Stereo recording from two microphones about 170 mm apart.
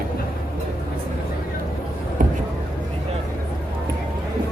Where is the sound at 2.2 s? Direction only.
55° right (ahead or behind).